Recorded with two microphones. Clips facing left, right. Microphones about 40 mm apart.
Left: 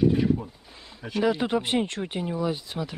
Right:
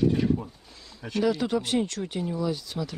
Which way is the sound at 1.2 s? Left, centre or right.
Left.